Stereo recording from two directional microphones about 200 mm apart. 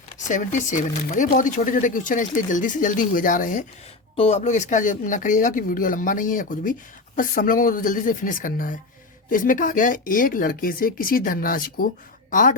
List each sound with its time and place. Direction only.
0.3 s speech: 40° left (ahead or behind)